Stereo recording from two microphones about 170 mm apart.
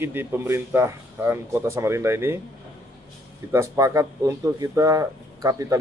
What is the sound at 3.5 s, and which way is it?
A man's voice, 15° right (ahead or behind).